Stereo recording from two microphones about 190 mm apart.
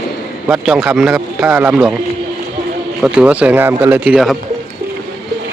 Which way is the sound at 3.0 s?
5° right (ahead or behind).